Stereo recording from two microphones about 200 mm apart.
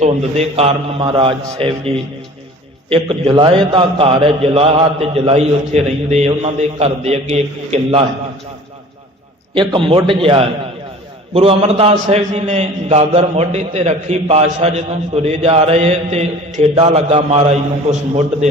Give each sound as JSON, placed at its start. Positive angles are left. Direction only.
{"t": 0.0, "sound": "a man's voice", "side_deg": -30}
{"t": 2.9, "sound": "a man's voice", "side_deg": -25}
{"t": 9.6, "sound": "a man's voice", "side_deg": -25}